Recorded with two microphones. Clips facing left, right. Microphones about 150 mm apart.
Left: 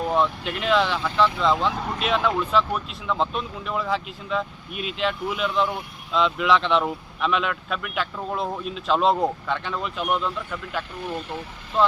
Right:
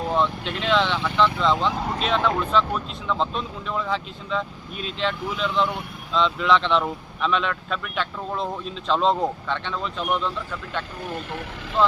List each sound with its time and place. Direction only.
0.1 s speech: 5° left (ahead or behind)